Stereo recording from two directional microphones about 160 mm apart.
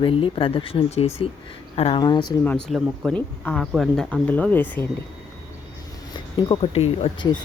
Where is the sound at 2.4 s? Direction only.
5° left (ahead or behind).